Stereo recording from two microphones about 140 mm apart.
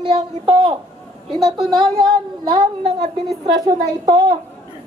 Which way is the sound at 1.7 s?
35° right (ahead or behind).